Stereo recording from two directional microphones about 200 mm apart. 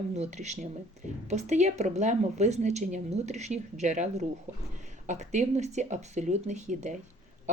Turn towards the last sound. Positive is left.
turn(degrees=-35)  # may be behind; listen again after turning